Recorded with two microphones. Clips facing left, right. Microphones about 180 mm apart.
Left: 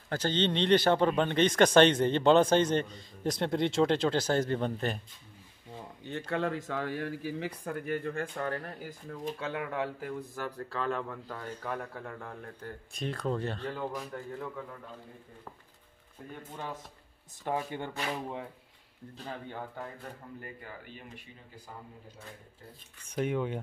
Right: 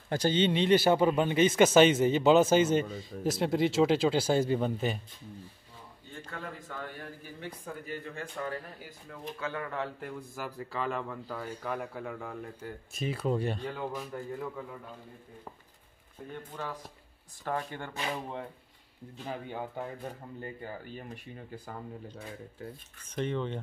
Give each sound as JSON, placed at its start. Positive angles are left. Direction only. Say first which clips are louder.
{"t": 0.1, "sound": "speech", "louder": "right 3 dB", "side_deg": -10}
{"t": 6.0, "sound": "speech", "louder": "left 10 dB", "side_deg": 75}
{"t": 9.4, "sound": "speech", "louder": "even", "side_deg": 15}
{"t": 9.9, "sound": "speech", "louder": "left 2 dB", "side_deg": 0}
{"t": 16.5, "sound": "speech", "louder": "even", "side_deg": 20}
{"t": 19.2, "sound": "speech", "louder": "right 3 dB", "side_deg": -15}
{"t": 20.3, "sound": "speech", "louder": "right 4 dB", "side_deg": -25}
{"t": 20.8, "sound": "speech", "louder": "right 5 dB", "side_deg": -40}
{"t": 23.0, "sound": "speech", "louder": "left 2 dB", "side_deg": 10}